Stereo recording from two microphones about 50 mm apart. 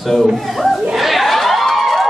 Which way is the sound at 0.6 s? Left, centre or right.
Centre.